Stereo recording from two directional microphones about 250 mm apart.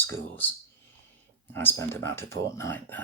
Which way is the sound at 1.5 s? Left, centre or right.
Centre.